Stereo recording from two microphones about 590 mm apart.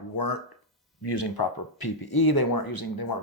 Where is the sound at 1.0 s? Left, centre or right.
Left.